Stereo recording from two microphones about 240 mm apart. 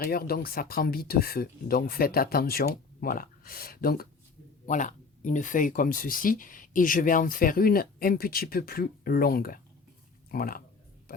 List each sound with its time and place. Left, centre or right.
0.0 s speech: left